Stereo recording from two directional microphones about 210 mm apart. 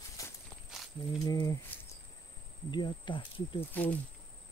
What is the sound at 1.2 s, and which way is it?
Speech, 15° left (ahead or behind).